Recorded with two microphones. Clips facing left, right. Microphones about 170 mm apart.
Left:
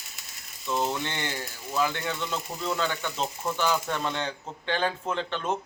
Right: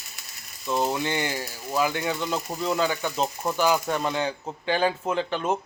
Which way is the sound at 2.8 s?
10° right (ahead or behind).